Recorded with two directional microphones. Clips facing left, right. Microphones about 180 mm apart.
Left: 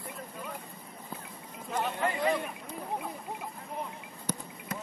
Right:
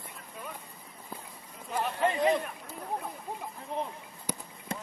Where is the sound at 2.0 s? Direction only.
20° right (ahead or behind).